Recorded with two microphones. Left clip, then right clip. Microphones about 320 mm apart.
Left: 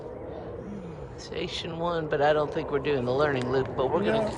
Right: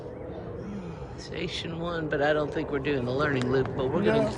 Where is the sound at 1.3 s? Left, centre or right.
Centre.